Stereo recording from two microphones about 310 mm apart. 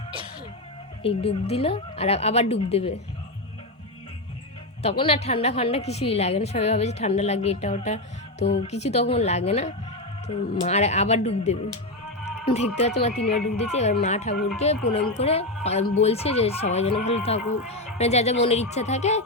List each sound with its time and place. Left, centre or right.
1.0 s a woman's voice: centre
4.8 s a woman's voice: centre